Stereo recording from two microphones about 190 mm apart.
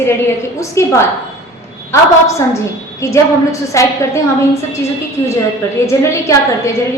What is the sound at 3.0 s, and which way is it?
Speech, 15° left (ahead or behind).